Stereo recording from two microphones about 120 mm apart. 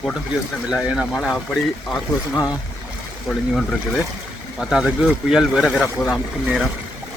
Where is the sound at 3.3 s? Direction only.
5° left (ahead or behind).